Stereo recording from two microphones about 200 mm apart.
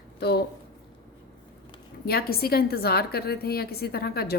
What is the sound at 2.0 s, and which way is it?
A woman's voice, 50° left (ahead or behind).